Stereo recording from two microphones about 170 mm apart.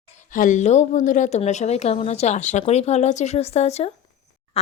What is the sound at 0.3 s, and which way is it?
A woman's voice, 45° left (ahead or behind).